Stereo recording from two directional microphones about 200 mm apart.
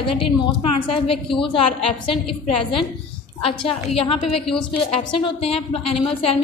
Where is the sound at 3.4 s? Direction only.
30° left (ahead or behind).